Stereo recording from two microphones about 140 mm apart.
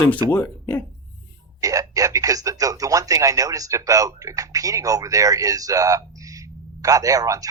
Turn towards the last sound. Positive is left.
turn(degrees=-25)  # may be behind; listen again after turning